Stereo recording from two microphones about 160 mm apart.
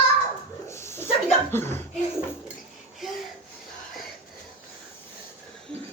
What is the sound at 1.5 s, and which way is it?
Speech, 15° left (ahead or behind).